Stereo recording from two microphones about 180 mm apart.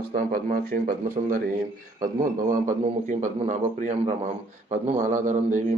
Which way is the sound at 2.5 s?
45° right (ahead or behind).